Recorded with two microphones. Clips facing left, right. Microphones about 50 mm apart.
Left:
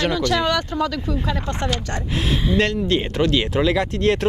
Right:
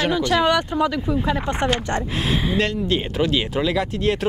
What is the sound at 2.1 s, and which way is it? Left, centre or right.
Speech, centre.